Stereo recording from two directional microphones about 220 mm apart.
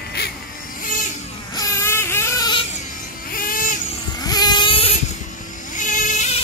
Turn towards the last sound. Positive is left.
turn(degrees=35)  # may be behind; listen again after turning